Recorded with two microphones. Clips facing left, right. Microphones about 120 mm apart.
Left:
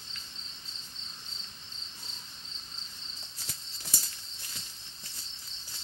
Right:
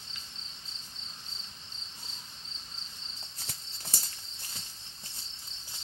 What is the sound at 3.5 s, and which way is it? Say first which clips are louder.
Horse: left 1 dB; 30° right (ahead or behind).